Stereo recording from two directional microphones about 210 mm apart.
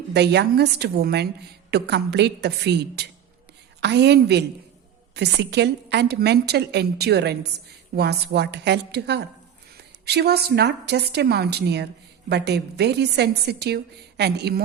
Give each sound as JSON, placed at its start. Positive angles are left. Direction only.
{"t": 0.1, "sound": "a woman's voice", "side_deg": -55}